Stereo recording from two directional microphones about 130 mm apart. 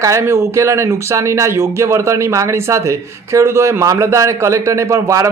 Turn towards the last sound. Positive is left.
turn(degrees=-25)  # may be behind; listen again after turning